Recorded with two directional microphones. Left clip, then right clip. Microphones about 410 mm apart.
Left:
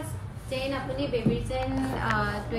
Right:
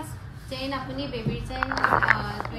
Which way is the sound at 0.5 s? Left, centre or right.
Right.